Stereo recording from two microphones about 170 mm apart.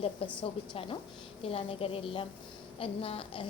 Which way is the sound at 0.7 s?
30° left (ahead or behind).